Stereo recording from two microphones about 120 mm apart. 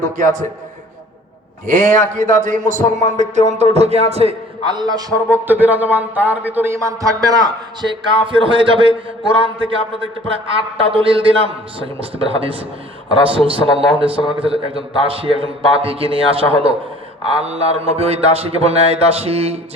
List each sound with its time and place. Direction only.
0.0 s a man's voice: 90° right
1.6 s a man's voice: 90° right; by 4.4 s 60° right (ahead or behind)
4.7 s a man's voice: 35° right (ahead or behind)
5.3 s speech: 15° right (ahead or behind)
6.8 s a man's voice: 30° right (ahead or behind); by 9.7 s 45° right (ahead or behind)
10.8 s a man's voice: 50° right (ahead or behind)